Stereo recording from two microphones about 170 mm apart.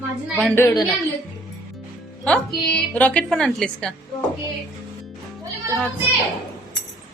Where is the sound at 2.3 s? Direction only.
5° left (ahead or behind).